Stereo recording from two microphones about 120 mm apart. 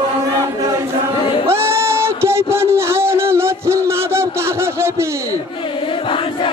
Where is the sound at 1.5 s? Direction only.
20° right (ahead or behind).